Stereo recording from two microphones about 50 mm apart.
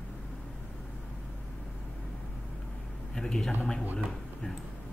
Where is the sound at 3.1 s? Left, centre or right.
Centre.